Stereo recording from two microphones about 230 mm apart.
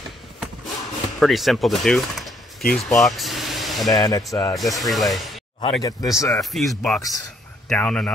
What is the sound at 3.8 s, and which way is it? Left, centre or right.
Speech, centre.